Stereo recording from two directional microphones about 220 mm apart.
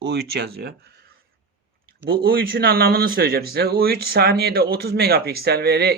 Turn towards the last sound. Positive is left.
turn(degrees=-45)  # may be behind; listen again after turning